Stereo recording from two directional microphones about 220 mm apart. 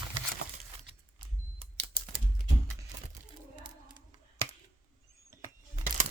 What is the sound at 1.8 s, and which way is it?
Typing, 25° right (ahead or behind).